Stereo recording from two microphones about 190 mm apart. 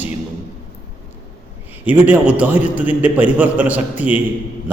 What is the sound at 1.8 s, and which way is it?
A man's voice, 10° right (ahead or behind).